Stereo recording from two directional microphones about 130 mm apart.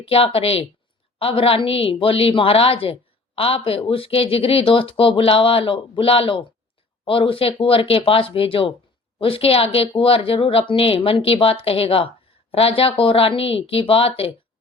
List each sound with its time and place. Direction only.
0.0 s a woman's voice: 45° left (ahead or behind)